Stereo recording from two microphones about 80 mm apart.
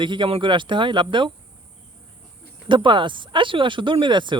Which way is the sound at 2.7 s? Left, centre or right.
Right.